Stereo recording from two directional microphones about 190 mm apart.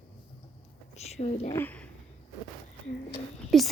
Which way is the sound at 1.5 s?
10° left (ahead or behind).